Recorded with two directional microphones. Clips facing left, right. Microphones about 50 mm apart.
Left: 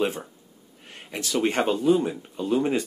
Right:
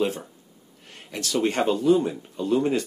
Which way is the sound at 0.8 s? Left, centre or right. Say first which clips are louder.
Even; centre.